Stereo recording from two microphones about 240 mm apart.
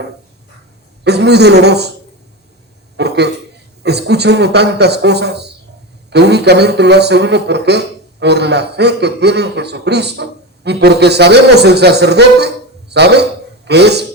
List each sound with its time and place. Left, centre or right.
1.0 s a man's voice: right
3.0 s a sound: right
3.8 s a man's voice: right